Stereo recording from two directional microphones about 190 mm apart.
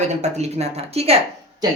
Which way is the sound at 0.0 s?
35° right (ahead or behind).